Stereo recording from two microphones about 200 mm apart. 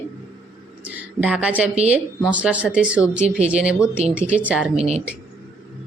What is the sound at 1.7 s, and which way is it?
Speech, 30° right (ahead or behind).